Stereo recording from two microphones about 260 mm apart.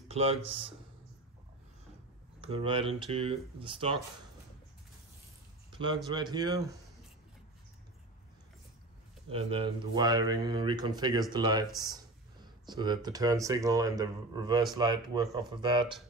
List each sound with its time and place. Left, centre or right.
0.1 s speech: right
2.4 s speech: right
6.0 s speech: centre
9.3 s speech: right